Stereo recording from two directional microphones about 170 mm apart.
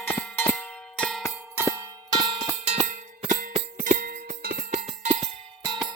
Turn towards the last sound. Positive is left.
turn(degrees=-25)  # may be behind; listen again after turning